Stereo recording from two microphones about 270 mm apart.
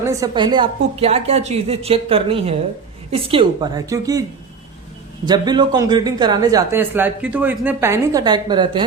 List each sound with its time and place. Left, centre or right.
0.0 s a woman's voice: centre
5.2 s speech: centre